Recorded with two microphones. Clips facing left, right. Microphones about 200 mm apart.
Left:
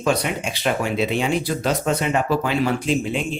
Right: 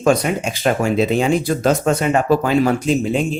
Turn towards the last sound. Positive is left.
turn(degrees=-40)  # may be behind; listen again after turning